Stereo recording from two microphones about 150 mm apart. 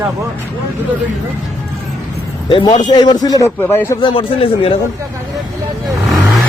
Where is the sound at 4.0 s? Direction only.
35° left (ahead or behind).